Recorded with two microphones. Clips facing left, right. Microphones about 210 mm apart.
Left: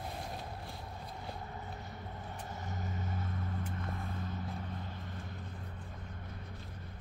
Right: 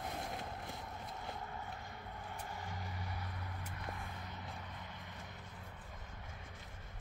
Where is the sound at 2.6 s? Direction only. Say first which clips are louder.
Left 5 dB; 20° left (ahead or behind).